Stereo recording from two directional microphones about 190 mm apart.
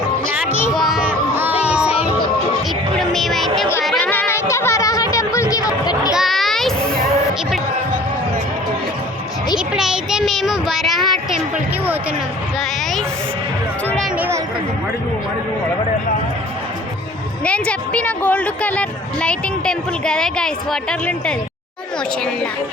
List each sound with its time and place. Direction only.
0.7 s a sound: centre (ahead or behind)
3.0 s music: centre (ahead or behind); by 6.1 s 20° left (ahead or behind)
6.1 s a sound: centre (ahead or behind)
9.6 s child singing: 5° right (ahead or behind)
12.5 s speech: centre (ahead or behind)
14.2 s speech: 15° right (ahead or behind)
17.4 s a woman's voice: 5° left (ahead or behind)